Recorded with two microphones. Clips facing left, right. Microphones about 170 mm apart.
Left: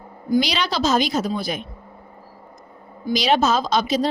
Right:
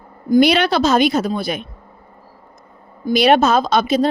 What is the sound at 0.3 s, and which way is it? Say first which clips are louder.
Speech: right 8 dB; 55° right (ahead or behind).